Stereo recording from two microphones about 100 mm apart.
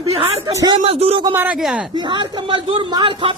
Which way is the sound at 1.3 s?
15° right (ahead or behind).